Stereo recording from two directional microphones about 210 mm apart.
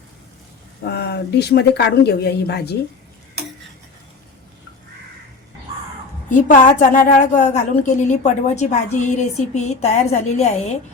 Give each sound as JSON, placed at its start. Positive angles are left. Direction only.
{"t": 0.9, "sound": "speech", "side_deg": 50}
{"t": 6.3, "sound": "a woman's voice", "side_deg": 40}